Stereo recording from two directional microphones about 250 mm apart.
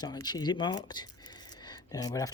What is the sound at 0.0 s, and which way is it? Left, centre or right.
Speech, centre.